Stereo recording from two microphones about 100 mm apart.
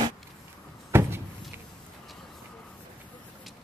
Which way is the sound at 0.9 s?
25° right (ahead or behind).